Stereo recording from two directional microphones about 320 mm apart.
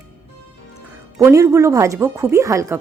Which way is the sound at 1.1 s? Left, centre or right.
Centre.